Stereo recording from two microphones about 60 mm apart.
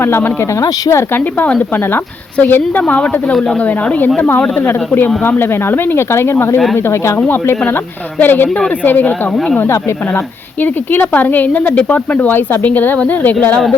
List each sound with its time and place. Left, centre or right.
0.0 s speech: left
0.6 s speech: left
1.1 s speech: left
4.2 s speech: left
8.2 s speech: left
10.6 s speech: left